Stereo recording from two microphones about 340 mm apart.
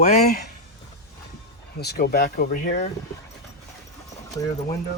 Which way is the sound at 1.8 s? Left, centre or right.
Left.